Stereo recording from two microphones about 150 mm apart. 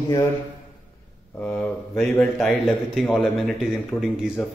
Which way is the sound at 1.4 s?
5° left (ahead or behind).